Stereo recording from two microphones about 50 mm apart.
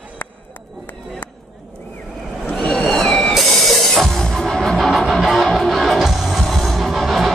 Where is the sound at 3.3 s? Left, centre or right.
Centre.